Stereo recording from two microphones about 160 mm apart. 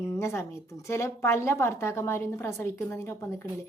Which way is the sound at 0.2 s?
15° left (ahead or behind).